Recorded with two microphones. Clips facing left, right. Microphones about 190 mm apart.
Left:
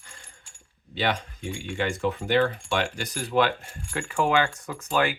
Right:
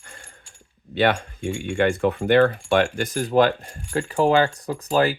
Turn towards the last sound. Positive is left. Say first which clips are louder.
# right 5 dB
turn(degrees=-35)  # may be behind; listen again after turning